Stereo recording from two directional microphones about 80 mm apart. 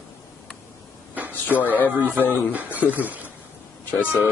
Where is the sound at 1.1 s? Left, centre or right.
Right.